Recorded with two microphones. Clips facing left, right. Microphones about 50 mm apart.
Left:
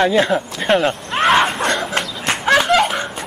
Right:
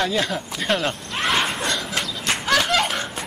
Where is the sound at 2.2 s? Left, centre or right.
Left.